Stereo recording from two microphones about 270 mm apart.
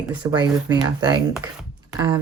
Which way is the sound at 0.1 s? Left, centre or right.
Centre.